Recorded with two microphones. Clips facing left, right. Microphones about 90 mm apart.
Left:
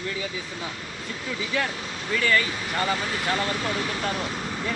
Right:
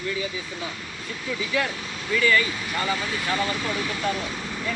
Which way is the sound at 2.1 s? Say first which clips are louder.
Right 2 dB; 40° left (ahead or behind).